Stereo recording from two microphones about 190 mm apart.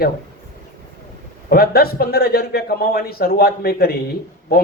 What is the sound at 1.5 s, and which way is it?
A man's voice, 55° left (ahead or behind).